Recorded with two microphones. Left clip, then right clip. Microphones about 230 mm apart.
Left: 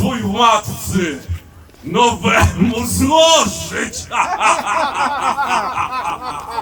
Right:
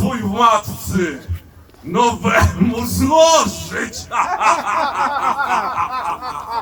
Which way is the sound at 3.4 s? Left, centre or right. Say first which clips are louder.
Left 1 dB; centre.